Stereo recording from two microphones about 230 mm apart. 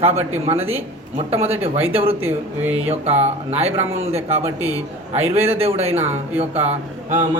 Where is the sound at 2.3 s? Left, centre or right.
Centre.